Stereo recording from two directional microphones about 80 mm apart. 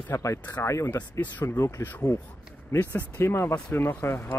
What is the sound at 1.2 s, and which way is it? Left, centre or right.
Speech, left.